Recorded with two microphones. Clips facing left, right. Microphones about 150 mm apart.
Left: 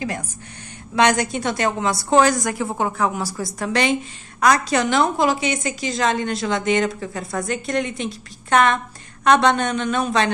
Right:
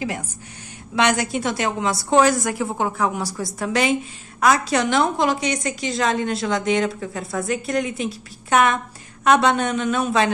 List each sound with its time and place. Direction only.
0.9 s a woman's voice: 5° right (ahead or behind)